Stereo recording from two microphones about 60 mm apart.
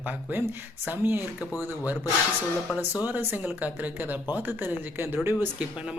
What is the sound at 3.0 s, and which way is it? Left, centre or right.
Speech, right.